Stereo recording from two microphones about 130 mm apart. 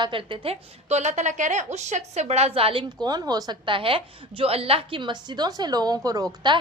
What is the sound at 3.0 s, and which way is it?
A woman's voice, 30° right (ahead or behind).